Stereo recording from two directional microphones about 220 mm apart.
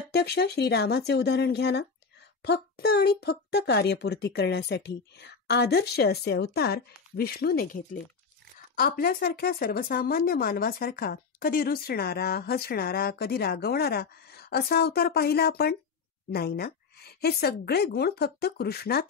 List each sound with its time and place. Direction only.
0.1 s speech: 50° left (ahead or behind)